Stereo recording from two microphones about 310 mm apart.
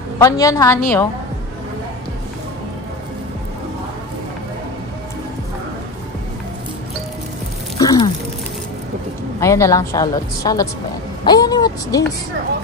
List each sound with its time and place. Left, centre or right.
0.2 s a woman's voice: centre
7.8 s a sound: centre
9.4 s a woman's voice: centre